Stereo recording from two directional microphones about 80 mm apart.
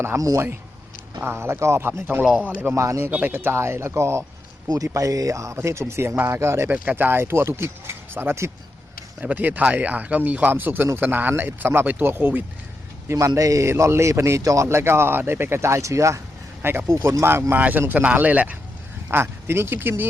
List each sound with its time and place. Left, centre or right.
0.2 s speech: right
1.2 s a man's voice: right
2.2 s speech: centre
2.7 s a man's voice: right
3.1 s a man's voice: right
6.7 s speech: centre
6.9 s speech: right
13.1 s a man's voice: right
16.6 s speech: right
17.0 s a man's voice: right
17.5 s speech: right
19.1 s speech: right